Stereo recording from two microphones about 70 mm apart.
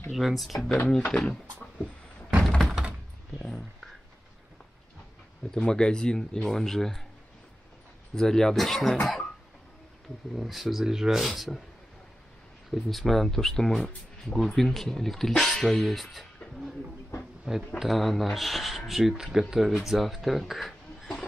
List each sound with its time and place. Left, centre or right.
0.1 s speech: centre
0.8 s speech: centre
2.3 s door: centre
5.5 s speech: centre
8.1 s speech: centre
10.3 s speech: centre
12.7 s speech: centre
17.7 s speech: centre